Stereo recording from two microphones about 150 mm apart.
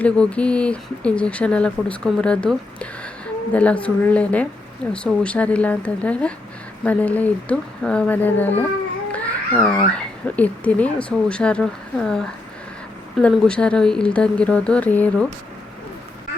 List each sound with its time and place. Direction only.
0.0 s speech: 10° left (ahead or behind)